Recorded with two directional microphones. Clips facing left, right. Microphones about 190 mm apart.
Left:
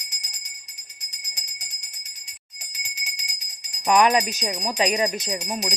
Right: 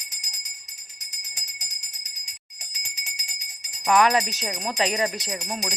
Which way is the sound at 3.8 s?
20° left (ahead or behind).